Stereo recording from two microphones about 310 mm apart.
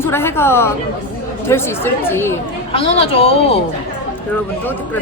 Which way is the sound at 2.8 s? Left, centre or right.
Centre.